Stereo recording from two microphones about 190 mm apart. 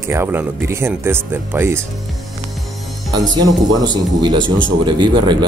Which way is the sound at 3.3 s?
20° right (ahead or behind).